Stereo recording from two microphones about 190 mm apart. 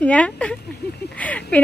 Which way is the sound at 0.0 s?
5° left (ahead or behind).